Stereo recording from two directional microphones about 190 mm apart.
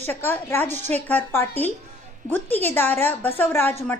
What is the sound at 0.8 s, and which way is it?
Speech, 35° right (ahead or behind).